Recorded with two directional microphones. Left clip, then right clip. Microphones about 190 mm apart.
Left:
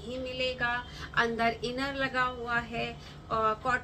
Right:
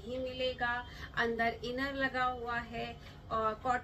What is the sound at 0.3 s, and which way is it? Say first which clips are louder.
A woman's voice: left 5 dB; 10° left (ahead or behind).